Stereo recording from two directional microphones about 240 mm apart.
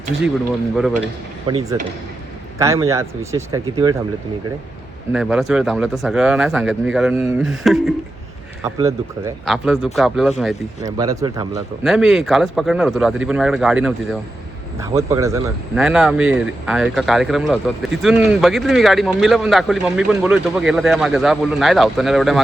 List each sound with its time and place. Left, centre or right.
0.8 s speech: centre
1.5 s speech: centre
5.1 s speech: centre
9.5 s speech: centre
10.8 s speech: centre
11.8 s speech: centre